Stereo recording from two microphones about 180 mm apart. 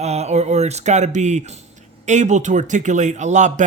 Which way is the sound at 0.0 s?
40° right (ahead or behind).